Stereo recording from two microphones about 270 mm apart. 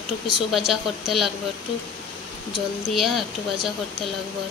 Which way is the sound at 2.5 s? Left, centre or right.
Centre.